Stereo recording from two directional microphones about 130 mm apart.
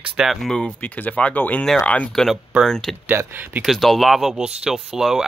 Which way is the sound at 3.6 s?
Centre (ahead or behind).